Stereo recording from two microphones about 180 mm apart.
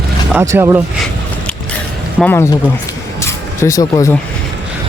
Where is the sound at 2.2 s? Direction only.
10° left (ahead or behind).